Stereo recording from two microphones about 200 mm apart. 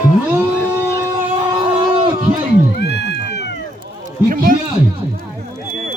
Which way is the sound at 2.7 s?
55° left (ahead or behind).